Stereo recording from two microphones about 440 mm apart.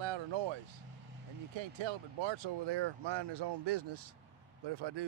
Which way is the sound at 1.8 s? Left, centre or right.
Right.